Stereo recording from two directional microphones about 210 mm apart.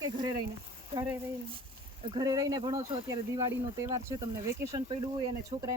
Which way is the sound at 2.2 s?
20° right (ahead or behind).